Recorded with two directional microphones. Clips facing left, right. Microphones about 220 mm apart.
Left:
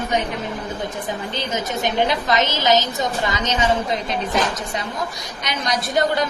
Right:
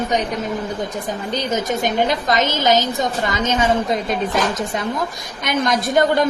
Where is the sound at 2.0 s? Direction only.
45° right (ahead or behind).